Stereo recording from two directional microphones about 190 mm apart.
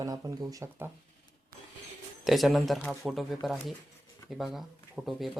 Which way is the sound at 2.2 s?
Centre (ahead or behind).